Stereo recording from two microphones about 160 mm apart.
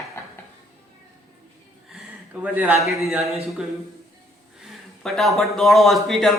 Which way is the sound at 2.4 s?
10° right (ahead or behind).